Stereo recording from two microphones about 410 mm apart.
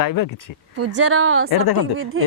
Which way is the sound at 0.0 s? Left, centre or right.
Left.